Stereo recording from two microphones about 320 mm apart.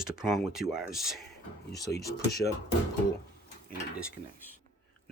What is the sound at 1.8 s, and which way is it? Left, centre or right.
Speech, left.